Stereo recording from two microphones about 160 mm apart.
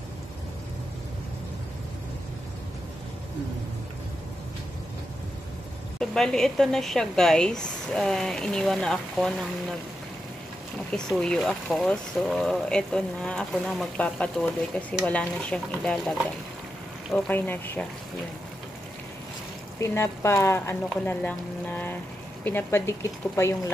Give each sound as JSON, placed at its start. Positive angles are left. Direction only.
{"t": 5.9, "sound": "speech", "side_deg": 5}
{"t": 11.1, "sound": "speech", "side_deg": 5}
{"t": 17.3, "sound": "speech", "side_deg": 10}
{"t": 19.8, "sound": "speech", "side_deg": 15}